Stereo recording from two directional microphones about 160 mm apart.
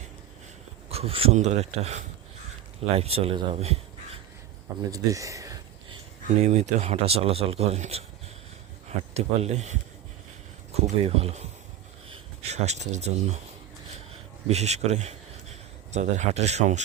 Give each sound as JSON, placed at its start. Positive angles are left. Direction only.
{"t": 0.9, "sound": "a man's voice", "side_deg": -40}
{"t": 4.9, "sound": "a sound", "side_deg": -20}
{"t": 6.2, "sound": "a man's voice", "side_deg": -45}
{"t": 9.1, "sound": "a man's voice", "side_deg": -45}
{"t": 10.8, "sound": "a man's voice", "side_deg": -40}
{"t": 13.9, "sound": "a sound", "side_deg": -40}
{"t": 15.9, "sound": "a man's voice", "side_deg": -45}